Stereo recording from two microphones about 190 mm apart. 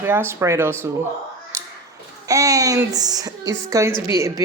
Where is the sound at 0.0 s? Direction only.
10° right (ahead or behind).